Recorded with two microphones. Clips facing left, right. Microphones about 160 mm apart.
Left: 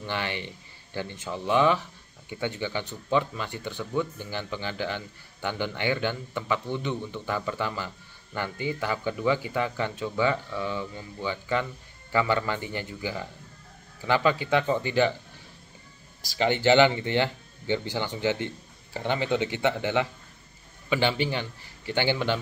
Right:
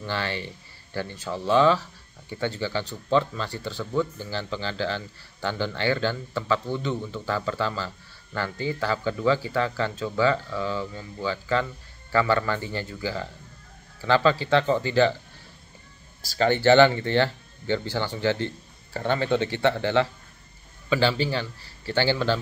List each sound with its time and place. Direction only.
0.0 s speech: 20° left (ahead or behind)
16.2 s speech: 15° left (ahead or behind)